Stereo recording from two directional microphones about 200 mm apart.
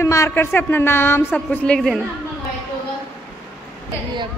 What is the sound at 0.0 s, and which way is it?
Speech, 15° left (ahead or behind).